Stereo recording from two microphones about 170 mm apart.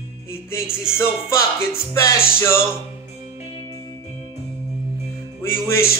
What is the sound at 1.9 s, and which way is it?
Speech, 15° left (ahead or behind).